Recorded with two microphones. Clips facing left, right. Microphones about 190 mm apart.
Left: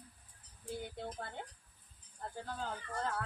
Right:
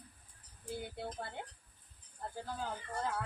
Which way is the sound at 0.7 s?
5° right (ahead or behind).